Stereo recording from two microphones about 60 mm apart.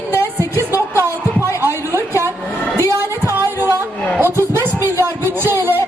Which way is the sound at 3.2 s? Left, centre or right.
Right.